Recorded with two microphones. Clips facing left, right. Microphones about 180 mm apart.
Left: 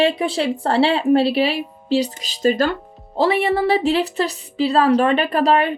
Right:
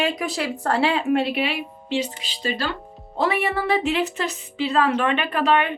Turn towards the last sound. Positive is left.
turn(degrees=35)  # may be behind; listen again after turning